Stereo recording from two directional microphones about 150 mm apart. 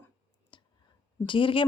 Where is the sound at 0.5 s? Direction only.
30° left (ahead or behind).